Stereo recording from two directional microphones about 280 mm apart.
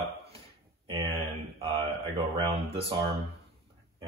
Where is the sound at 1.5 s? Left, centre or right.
Centre.